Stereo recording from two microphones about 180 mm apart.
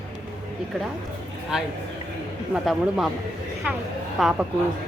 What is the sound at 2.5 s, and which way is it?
Speech, centre (ahead or behind).